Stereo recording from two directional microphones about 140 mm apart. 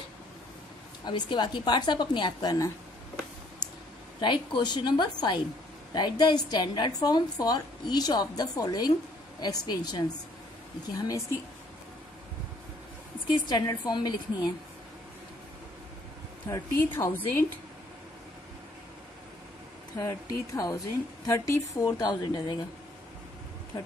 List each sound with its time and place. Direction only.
1.0 s a woman's voice: 30° left (ahead or behind)
4.2 s a woman's voice: 35° left (ahead or behind)
13.5 s a woman's voice: 30° left (ahead or behind)
16.5 s a woman's voice: 20° left (ahead or behind)
20.0 s a woman's voice: 25° left (ahead or behind)